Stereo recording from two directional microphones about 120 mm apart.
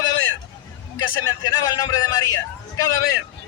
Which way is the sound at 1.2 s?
30° left (ahead or behind).